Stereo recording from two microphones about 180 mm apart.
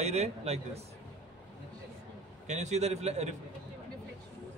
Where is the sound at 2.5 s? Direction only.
40° right (ahead or behind).